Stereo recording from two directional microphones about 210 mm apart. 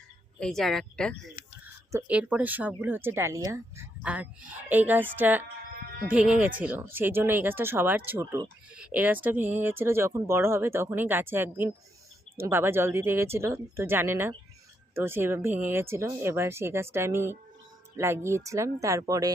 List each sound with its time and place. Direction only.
0.3 s speech: centre (ahead or behind)
1.4 s a sound: 40° left (ahead or behind)
1.9 s speech: 10° right (ahead or behind)